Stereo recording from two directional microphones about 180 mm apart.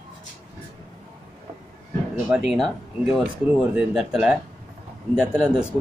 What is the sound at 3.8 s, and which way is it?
Speech, 5° right (ahead or behind).